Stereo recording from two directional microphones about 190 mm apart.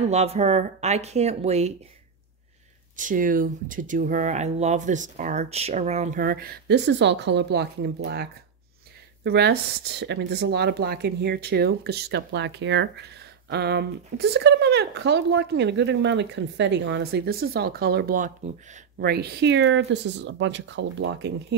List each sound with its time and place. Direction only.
0.1 s speech: 35° right (ahead or behind)
3.0 s speech: 45° right (ahead or behind)
18.9 s speech: 55° right (ahead or behind)